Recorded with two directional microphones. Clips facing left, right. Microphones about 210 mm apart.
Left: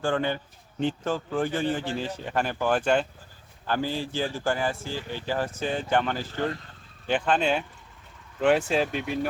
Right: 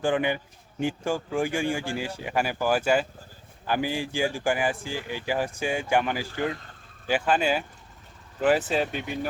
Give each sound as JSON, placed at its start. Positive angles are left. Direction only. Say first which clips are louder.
{"t": 0.0, "sound": "speech", "louder": "right 2 dB", "side_deg": -15}